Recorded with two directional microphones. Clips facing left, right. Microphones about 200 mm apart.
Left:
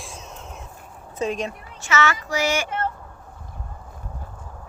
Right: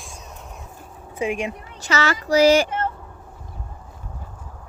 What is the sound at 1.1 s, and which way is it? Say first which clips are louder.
Speech: right 1 dB; 10° right (ahead or behind).